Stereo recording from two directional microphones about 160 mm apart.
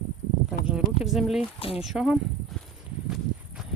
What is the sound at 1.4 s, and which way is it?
Speech, 35° left (ahead or behind).